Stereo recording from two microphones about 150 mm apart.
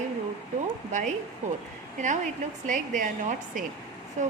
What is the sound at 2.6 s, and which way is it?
Speech, 60° right (ahead or behind).